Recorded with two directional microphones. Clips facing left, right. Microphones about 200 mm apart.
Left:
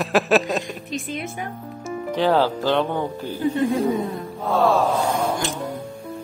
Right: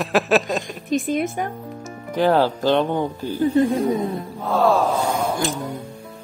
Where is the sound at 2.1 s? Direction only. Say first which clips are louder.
Right 2 dB; 15° right (ahead or behind).